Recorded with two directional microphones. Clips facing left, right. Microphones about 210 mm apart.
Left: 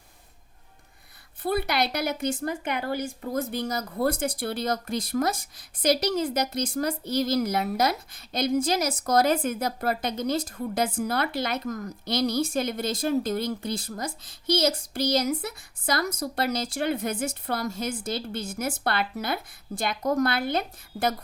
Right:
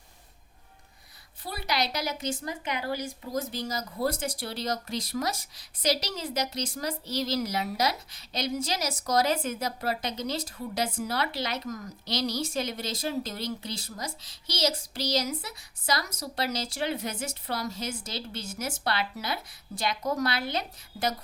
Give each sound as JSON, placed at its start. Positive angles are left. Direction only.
{"t": 1.4, "sound": "a woman's voice", "side_deg": 55}